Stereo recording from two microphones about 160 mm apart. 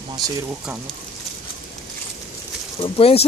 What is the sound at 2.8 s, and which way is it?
Speech, 35° left (ahead or behind).